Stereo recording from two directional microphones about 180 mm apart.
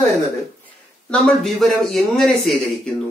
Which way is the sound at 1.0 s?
5° left (ahead or behind).